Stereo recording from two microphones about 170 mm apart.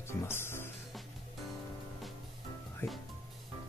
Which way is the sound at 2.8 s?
15° left (ahead or behind).